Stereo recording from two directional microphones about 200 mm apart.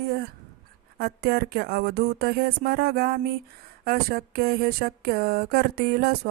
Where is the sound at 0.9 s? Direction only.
50° right (ahead or behind).